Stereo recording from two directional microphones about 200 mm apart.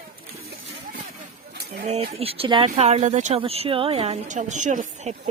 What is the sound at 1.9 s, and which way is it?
Speech, 30° right (ahead or behind).